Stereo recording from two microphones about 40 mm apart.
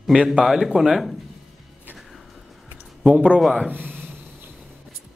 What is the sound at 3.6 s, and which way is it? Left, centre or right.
Speech, right.